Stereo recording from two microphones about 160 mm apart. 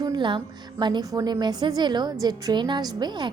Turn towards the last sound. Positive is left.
turn(degrees=-25)  # may be behind; listen again after turning